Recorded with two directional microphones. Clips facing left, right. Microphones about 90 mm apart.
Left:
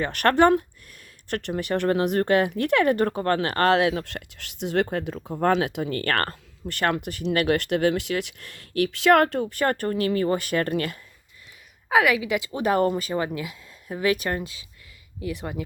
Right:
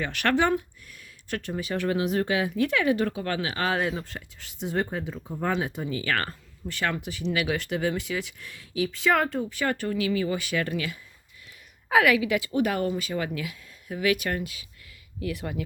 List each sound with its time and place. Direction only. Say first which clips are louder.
0.0 s speech: left 5 dB; 50° left (ahead or behind)
11.9 s a woman's voice: even; 15° left (ahead or behind)
12.5 s speech: left 6 dB; 35° left (ahead or behind); by 15.6 s 20° left (ahead or behind)